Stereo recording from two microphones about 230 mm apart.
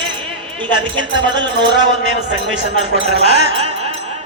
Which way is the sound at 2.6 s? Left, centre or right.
Right.